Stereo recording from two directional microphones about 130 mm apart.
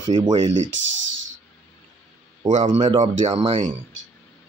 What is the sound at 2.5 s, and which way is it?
Speech, 60° right (ahead or behind).